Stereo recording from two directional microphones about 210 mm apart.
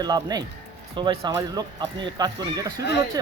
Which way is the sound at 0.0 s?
20° right (ahead or behind).